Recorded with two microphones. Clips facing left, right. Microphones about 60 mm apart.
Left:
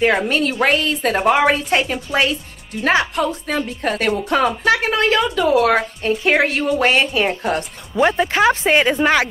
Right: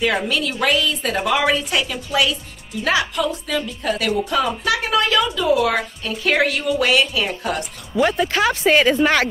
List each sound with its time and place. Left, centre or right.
0.3 s a woman's voice: left
1.3 s a woman's voice: left
5.2 s speech: left
6.2 s speech: left
6.8 s a woman's voice: left
8.0 s a woman's voice: left